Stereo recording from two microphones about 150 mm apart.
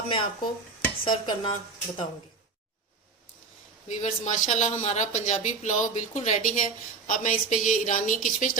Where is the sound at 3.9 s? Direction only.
55° left (ahead or behind).